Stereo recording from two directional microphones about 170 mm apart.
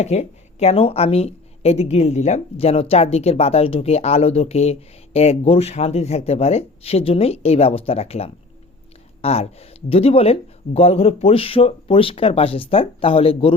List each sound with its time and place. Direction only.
0.0 s a woman's voice: 40° left (ahead or behind)